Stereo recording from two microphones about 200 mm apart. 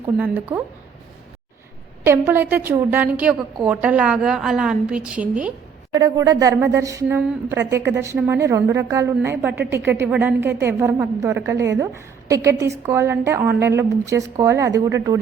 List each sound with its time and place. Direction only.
0.0 s a woman's voice: 10° right (ahead or behind)
2.0 s a woman's voice: 10° right (ahead or behind)
5.9 s a woman's voice: 20° right (ahead or behind)
11.5 s a woman's voice: 60° right (ahead or behind)
12.3 s a woman's voice: 15° right (ahead or behind)